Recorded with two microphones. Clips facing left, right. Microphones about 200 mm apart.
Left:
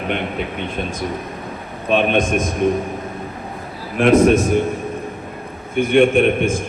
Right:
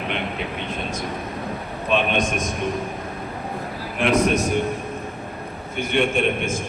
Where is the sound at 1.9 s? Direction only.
55° left (ahead or behind).